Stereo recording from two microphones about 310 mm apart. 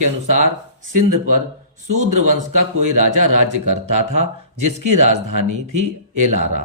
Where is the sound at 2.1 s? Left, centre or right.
Right.